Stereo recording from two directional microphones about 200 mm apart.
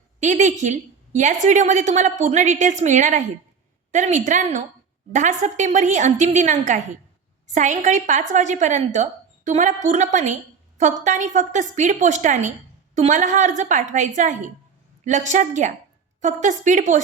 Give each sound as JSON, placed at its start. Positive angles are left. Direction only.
{"t": 0.2, "sound": "a woman's voice", "side_deg": -40}